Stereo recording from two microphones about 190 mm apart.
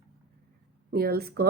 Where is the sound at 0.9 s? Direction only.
55° right (ahead or behind).